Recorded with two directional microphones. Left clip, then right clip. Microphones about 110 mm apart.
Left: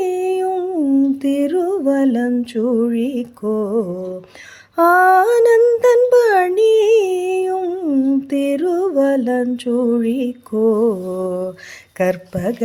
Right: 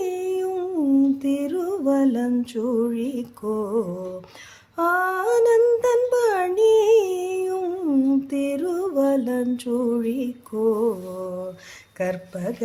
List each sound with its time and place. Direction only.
0.0 s humming: 40° left (ahead or behind)
1.2 s music: 40° left (ahead or behind)
4.8 s humming: 65° left (ahead or behind); by 5.5 s 50° left (ahead or behind)
5.8 s music: 45° left (ahead or behind)
7.6 s humming: 15° left (ahead or behind)
8.3 s music: 35° left (ahead or behind)
11.9 s speech: 50° left (ahead or behind)